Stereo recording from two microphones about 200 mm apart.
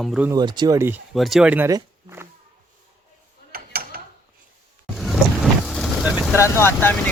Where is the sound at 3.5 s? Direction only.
45° right (ahead or behind).